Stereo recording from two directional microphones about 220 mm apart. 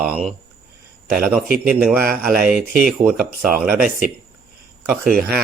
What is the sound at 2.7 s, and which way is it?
Speech, 40° right (ahead or behind).